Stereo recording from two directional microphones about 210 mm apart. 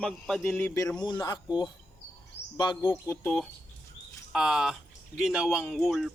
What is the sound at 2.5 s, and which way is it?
Speech, 20° left (ahead or behind).